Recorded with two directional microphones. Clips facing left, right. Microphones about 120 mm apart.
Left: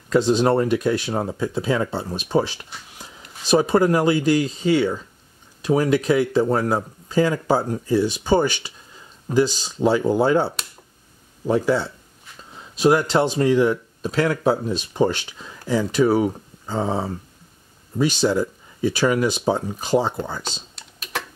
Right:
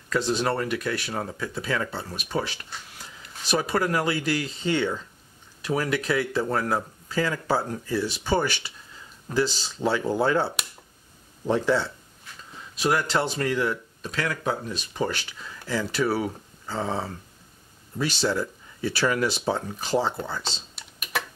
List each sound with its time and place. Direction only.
0.1 s speech: 25° left (ahead or behind)
12.7 s speech: 25° left (ahead or behind)
20.7 s typing: 10° right (ahead or behind)